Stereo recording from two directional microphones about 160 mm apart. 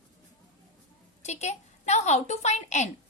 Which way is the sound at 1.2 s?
45° left (ahead or behind).